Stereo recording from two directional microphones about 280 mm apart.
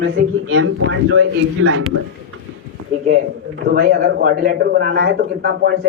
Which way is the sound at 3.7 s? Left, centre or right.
Right.